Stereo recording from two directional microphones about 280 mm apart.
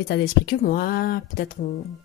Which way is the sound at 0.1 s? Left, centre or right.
Left.